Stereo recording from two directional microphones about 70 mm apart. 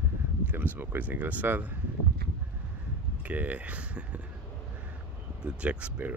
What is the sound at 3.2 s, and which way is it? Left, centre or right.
Speech, right.